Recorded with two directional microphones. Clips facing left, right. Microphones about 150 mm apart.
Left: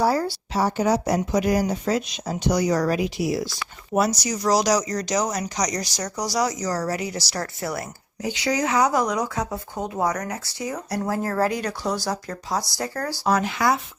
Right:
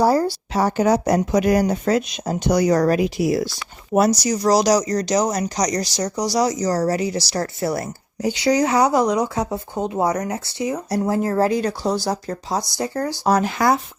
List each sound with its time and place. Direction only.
0.0 s speech: 40° right (ahead or behind)
0.5 s speech: 60° right (ahead or behind); by 13.1 s 20° right (ahead or behind)
13.2 s speech: 40° right (ahead or behind)